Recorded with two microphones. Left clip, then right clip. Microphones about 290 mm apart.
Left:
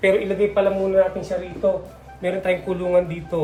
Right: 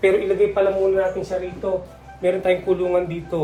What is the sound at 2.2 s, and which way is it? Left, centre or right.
Speech, centre.